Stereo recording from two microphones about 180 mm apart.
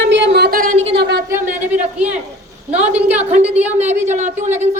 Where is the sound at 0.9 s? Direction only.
65° right (ahead or behind).